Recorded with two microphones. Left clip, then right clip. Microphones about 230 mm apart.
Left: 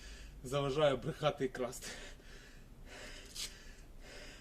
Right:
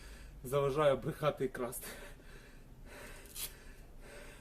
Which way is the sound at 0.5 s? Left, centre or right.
Centre.